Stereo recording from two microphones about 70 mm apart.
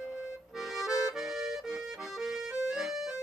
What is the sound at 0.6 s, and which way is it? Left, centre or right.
Music, centre.